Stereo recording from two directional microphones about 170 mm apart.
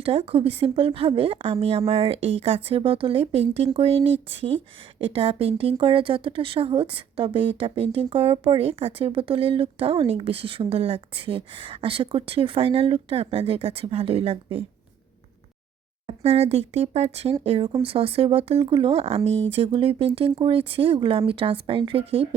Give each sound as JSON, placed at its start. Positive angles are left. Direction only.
{"t": 0.0, "sound": "a woman's voice", "side_deg": -35}
{"t": 16.0, "sound": "a woman's voice", "side_deg": -35}